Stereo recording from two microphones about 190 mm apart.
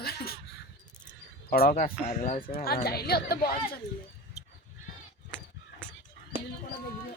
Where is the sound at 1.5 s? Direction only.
50° left (ahead or behind).